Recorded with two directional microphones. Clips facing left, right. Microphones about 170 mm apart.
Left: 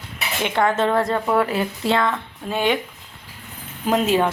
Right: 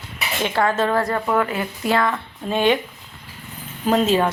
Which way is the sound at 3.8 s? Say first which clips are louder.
Right 1 dB; 10° left (ahead or behind).